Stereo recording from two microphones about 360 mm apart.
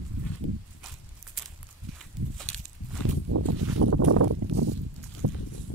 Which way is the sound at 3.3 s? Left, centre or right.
Right.